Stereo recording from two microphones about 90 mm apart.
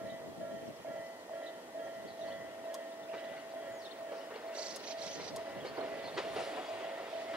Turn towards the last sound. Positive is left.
turn(degrees=-10)  # may be behind; listen again after turning